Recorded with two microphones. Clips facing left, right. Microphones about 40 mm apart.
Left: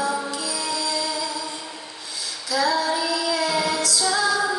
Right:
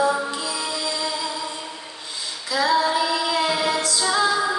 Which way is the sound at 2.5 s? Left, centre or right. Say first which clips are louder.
Right 2 dB; right.